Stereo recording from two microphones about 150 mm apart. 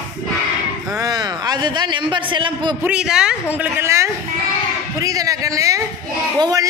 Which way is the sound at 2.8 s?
5° right (ahead or behind).